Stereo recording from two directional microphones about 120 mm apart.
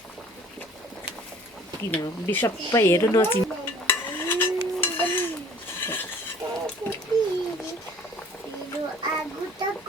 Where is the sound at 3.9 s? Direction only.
20° left (ahead or behind).